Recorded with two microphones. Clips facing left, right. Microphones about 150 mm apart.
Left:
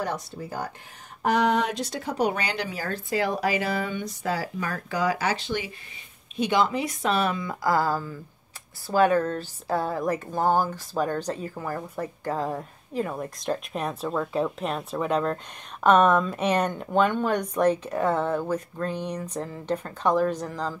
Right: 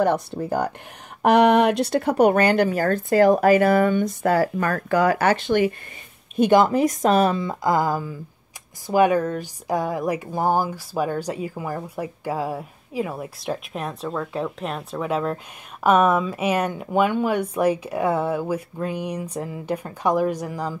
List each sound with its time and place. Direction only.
0.0 s a woman's voice: 55° right (ahead or behind); by 20.7 s 10° right (ahead or behind)